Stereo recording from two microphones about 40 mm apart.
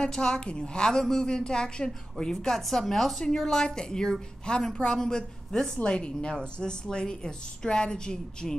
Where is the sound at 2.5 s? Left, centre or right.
Centre.